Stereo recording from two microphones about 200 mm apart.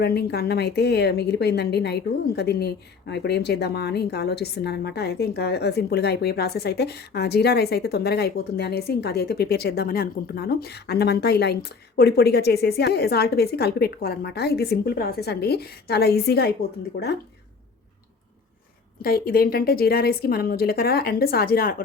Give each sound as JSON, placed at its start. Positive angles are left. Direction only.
{"t": 0.0, "sound": "a woman's voice", "side_deg": 55}
{"t": 19.0, "sound": "a woman's voice", "side_deg": 50}